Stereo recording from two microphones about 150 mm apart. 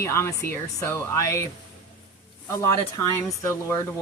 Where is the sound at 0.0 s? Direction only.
20° left (ahead or behind).